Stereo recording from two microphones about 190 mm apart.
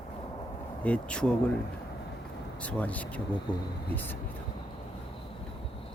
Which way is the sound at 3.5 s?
25° left (ahead or behind).